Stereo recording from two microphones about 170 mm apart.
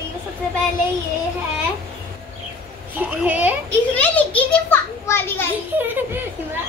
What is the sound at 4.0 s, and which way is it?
A child's voice, 10° left (ahead or behind).